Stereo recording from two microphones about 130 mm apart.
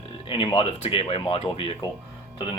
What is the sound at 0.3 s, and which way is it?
Speech, 40° left (ahead or behind).